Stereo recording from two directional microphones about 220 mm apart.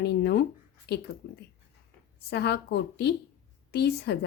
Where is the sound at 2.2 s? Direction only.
45° left (ahead or behind).